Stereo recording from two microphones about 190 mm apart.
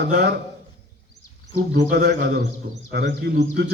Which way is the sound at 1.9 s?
55° right (ahead or behind).